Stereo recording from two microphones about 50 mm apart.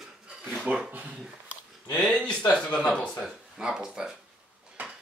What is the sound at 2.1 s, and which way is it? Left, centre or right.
Speech, centre.